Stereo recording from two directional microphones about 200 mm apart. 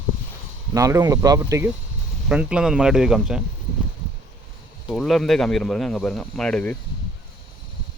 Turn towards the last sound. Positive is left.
turn(degrees=5)  # may be behind; listen again after turning